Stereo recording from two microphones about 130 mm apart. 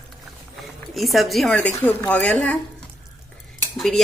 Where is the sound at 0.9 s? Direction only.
Centre (ahead or behind).